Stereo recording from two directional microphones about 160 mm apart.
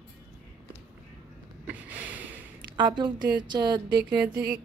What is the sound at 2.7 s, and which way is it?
A woman's voice, 30° right (ahead or behind).